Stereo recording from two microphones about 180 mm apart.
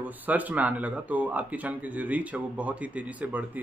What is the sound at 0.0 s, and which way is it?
A man's voice, 10° right (ahead or behind).